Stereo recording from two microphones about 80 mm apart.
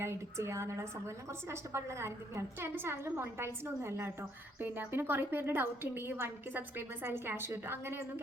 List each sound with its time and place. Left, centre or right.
0.0 s a woman's voice: right